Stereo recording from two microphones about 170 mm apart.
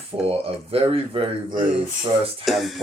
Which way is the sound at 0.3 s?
35° right (ahead or behind).